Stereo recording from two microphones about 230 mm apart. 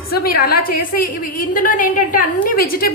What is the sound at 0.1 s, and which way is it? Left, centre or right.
A woman's voice, left.